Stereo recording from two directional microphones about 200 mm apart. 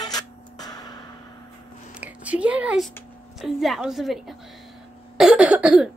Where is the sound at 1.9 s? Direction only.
5° right (ahead or behind).